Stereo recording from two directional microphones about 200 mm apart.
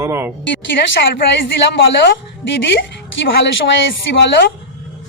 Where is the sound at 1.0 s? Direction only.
60° left (ahead or behind).